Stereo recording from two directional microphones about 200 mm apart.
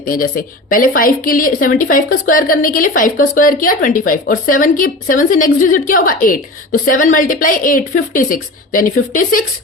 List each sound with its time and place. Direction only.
0.0 s speech: 45° left (ahead or behind)